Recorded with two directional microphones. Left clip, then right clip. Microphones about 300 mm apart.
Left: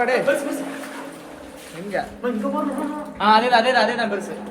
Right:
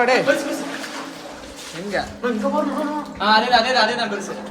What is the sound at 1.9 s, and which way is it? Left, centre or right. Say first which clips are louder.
Speech: right 1 dB; centre.